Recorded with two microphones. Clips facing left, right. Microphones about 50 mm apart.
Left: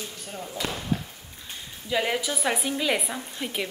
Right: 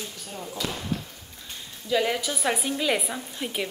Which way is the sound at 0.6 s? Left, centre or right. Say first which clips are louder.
Left 1 dB; left.